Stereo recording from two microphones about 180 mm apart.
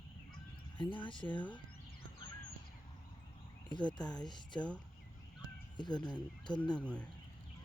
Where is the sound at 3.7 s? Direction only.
25° left (ahead or behind).